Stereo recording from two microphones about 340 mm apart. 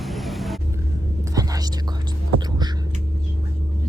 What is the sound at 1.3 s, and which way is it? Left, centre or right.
Whispering, centre.